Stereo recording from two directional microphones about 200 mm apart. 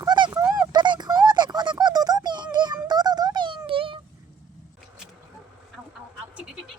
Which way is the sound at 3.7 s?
25° right (ahead or behind).